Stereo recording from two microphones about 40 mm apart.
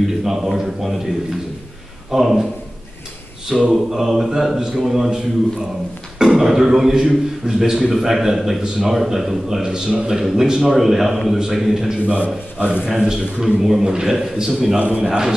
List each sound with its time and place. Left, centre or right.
0.0 s a man's voice: centre
2.0 s a man's voice: centre
3.7 s a man's voice: centre
6.2 s a man's voice: centre
12.1 s a man's voice: right
13.0 s a man's voice: centre
14.8 s a man's voice: right
15.0 s a man's voice: centre